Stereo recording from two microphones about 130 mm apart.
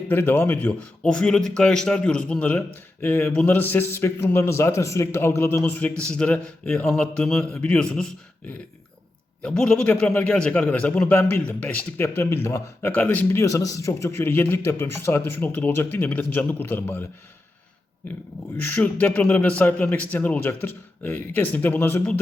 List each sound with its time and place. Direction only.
0.1 s a man's voice: 15° left (ahead or behind)
9.4 s a man's voice: 5° left (ahead or behind)
18.6 s a man's voice: 10° left (ahead or behind)